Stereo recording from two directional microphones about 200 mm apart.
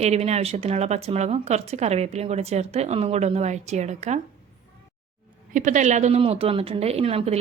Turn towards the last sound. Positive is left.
turn(degrees=-30)  # may be behind; listen again after turning